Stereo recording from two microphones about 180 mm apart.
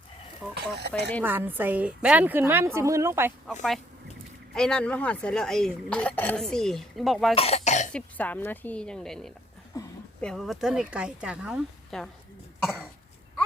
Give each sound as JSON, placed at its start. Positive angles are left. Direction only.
{"t": 0.8, "sound": "speech", "side_deg": -65}
{"t": 1.2, "sound": "a woman's voice", "side_deg": -10}
{"t": 4.5, "sound": "speech", "side_deg": 5}
{"t": 7.3, "sound": "speech", "side_deg": 35}
{"t": 7.9, "sound": "speech", "side_deg": 10}
{"t": 9.7, "sound": "a sound", "side_deg": 20}
{"t": 10.2, "sound": "speech", "side_deg": 5}
{"t": 12.6, "sound": "cough", "side_deg": 5}